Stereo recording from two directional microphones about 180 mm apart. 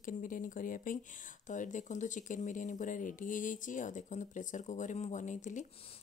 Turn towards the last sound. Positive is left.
turn(degrees=45)  # may be behind; listen again after turning